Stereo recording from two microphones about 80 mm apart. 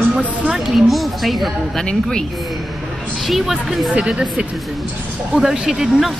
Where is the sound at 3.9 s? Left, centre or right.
Centre.